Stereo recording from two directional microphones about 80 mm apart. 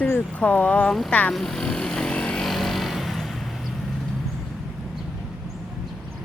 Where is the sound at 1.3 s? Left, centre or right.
Centre.